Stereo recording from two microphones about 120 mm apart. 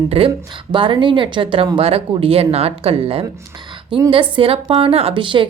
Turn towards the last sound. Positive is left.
turn(degrees=-45)  # may be behind; listen again after turning